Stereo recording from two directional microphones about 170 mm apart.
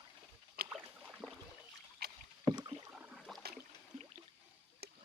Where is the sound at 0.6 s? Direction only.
Centre (ahead or behind).